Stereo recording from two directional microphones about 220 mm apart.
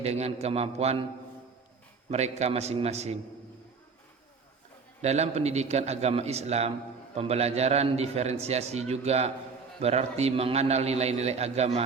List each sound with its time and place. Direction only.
0.0 s a man's voice: 30° right (ahead or behind)
2.0 s a man's voice: 30° right (ahead or behind)
5.0 s a man's voice: 30° right (ahead or behind)